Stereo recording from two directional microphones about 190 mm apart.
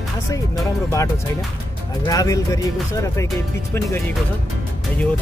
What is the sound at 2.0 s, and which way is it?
Speech, 20° left (ahead or behind).